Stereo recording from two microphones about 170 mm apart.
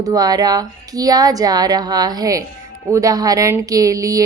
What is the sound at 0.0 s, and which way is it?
A woman's voice, 20° right (ahead or behind).